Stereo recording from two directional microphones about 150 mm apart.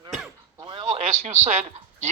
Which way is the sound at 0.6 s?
30° right (ahead or behind).